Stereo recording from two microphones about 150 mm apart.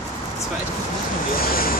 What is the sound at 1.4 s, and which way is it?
Vehicle, 75° left (ahead or behind).